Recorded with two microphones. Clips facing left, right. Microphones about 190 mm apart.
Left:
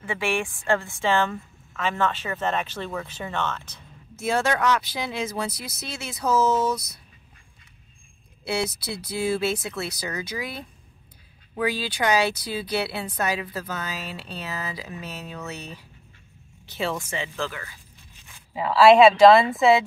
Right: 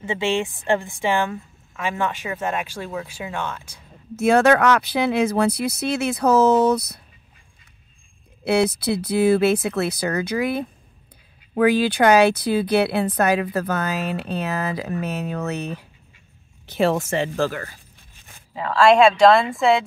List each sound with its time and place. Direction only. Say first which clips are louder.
0.0 s a woman's voice: right 4 dB; 20° right (ahead or behind)
4.2 s speech: right 8 dB; 65° right (ahead or behind)
8.5 s speech: right 9 dB; 55° right (ahead or behind)
18.5 s a woman's voice: left 1 dB; 5° left (ahead or behind)